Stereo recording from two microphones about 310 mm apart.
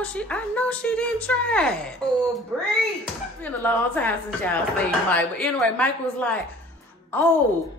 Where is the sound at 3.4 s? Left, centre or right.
Centre.